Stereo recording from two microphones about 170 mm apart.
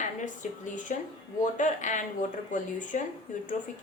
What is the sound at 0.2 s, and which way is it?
Speech, 50° left (ahead or behind).